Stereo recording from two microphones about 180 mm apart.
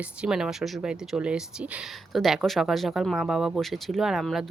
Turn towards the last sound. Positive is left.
turn(degrees=0)  # may be behind; listen again after turning